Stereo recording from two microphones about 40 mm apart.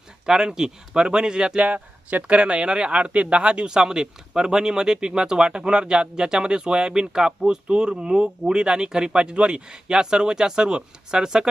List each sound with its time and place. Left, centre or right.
0.3 s speech: centre
1.6 s speech: right
2.2 s speech: right